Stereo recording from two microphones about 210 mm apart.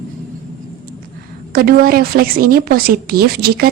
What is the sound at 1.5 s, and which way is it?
A woman's voice, 45° right (ahead or behind).